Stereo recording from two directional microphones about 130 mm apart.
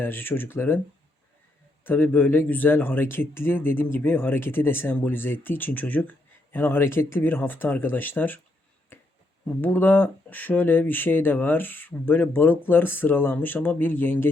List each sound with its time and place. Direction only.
0.0 s speech: 15° left (ahead or behind)
1.8 s speech: 15° left (ahead or behind)
8.9 s finger snapping: 15° left (ahead or behind)
9.6 s speech: 15° left (ahead or behind)